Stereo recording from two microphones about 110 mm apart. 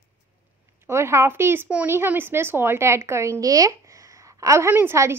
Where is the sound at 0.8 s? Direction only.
25° right (ahead or behind).